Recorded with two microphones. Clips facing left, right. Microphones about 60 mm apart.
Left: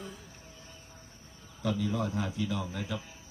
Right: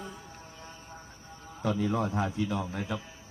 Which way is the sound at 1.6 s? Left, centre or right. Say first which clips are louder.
Right 3 dB; right.